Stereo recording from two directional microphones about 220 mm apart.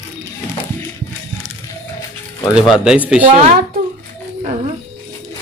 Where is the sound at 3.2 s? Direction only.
35° right (ahead or behind).